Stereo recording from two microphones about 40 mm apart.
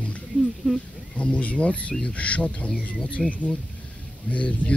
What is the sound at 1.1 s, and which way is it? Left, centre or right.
Speech, left.